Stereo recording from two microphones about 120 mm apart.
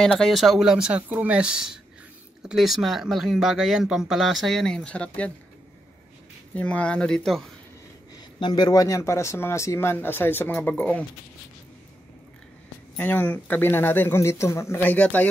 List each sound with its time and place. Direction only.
0.2 s speech: centre (ahead or behind)
6.5 s speech: 10° left (ahead or behind)
8.2 s speech: 35° left (ahead or behind); by 11.1 s 10° left (ahead or behind)
12.9 s speech: 15° left (ahead or behind)